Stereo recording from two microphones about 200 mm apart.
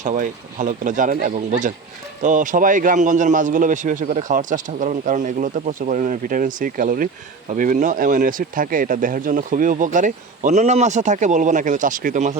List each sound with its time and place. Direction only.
0.0 s a man's voice: 40° right (ahead or behind)